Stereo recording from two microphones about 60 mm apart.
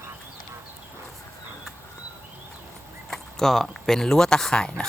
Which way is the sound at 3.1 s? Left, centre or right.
Centre.